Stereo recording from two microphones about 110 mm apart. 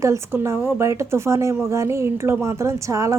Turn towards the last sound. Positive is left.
turn(degrees=-30)  # may be behind; listen again after turning